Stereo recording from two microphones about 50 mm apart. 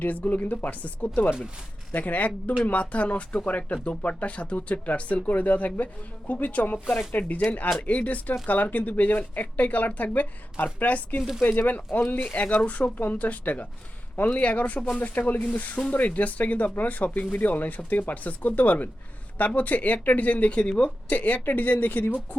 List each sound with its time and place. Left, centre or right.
0.0 s speech: left
11.2 s speech: centre
11.4 s speech: left